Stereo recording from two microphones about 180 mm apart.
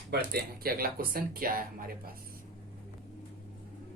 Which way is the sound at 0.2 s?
55° right (ahead or behind).